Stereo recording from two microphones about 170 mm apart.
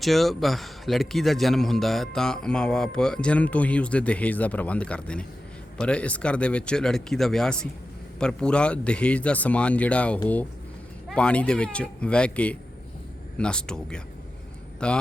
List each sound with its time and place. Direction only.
0.0 s a man's voice: centre (ahead or behind)